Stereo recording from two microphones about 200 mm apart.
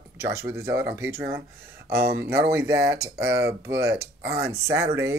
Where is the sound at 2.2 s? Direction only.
10° right (ahead or behind).